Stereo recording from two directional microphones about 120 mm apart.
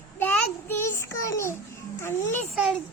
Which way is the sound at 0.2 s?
15° left (ahead or behind).